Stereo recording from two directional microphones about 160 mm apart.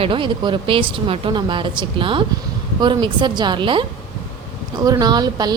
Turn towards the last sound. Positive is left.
turn(degrees=-25)  # may be behind; listen again after turning